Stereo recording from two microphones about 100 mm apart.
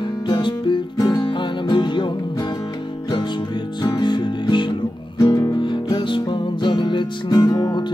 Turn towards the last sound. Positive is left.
turn(degrees=45)  # may be behind; listen again after turning